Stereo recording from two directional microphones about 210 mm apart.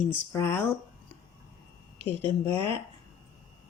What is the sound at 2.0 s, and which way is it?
Speech, 25° right (ahead or behind).